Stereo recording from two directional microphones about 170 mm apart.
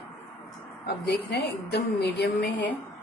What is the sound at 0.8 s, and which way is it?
A woman's voice, 80° left.